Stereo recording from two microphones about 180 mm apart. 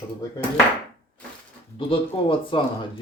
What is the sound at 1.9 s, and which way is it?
Speech, 30° left (ahead or behind).